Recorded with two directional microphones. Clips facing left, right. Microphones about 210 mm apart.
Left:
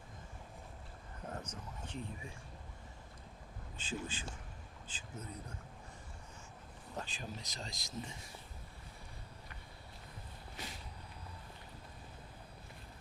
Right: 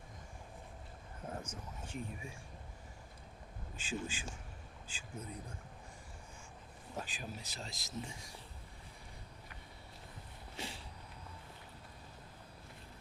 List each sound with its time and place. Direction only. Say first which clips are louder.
1.3 s speech: right 1 dB; 10° right (ahead or behind)
4.0 s speech: right 1 dB; 10° right (ahead or behind)
6.9 s speech: even; 5° right (ahead or behind)
10.6 s vehicle: right 3 dB; 25° right (ahead or behind)